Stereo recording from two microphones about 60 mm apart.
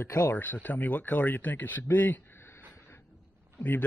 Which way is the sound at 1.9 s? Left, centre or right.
Left.